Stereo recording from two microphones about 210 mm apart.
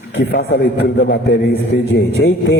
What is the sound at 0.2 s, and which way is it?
A man's voice, 55° left (ahead or behind).